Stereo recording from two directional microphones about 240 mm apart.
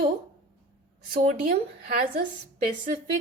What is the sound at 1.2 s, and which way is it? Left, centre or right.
Speech, right.